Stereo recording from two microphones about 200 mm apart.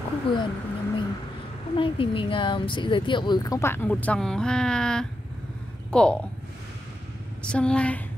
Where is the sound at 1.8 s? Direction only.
25° left (ahead or behind); by 6.1 s 5° left (ahead or behind).